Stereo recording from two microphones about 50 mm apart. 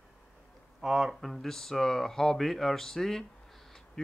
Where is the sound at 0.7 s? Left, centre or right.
Centre.